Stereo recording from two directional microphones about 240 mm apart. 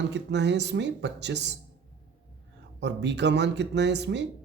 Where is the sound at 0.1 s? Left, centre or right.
Right.